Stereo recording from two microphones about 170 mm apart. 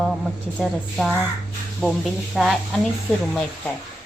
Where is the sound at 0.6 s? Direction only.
Centre (ahead or behind).